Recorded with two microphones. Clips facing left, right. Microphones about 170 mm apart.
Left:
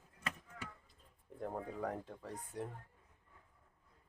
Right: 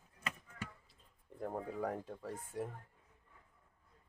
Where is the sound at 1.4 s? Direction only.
5° right (ahead or behind).